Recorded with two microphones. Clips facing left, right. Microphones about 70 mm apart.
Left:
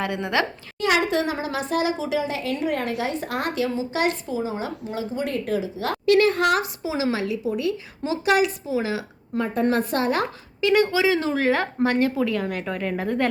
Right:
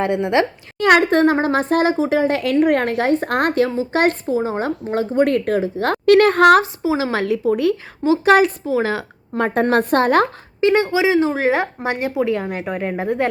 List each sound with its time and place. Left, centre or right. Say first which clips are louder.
0.0 s speech: right 7 dB; right
0.8 s speech: right 8 dB; right
6.6 s speech: right 6 dB; right
9.4 s a woman's voice: right 5 dB; right
10.6 s speech: right 4 dB; right
10.8 s speech: right 5 dB; centre